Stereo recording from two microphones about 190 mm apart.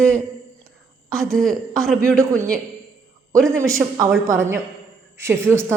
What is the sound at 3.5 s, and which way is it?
A woman's voice, 15° right (ahead or behind).